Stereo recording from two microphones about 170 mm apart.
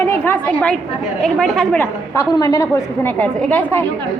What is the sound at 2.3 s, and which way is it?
A woman's voice, 20° left (ahead or behind).